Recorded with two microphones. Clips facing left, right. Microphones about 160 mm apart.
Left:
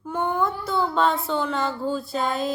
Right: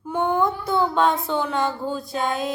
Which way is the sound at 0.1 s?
15° right (ahead or behind).